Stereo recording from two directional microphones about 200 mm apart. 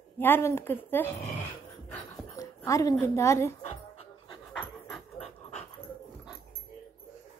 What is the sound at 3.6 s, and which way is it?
Music, 30° left (ahead or behind).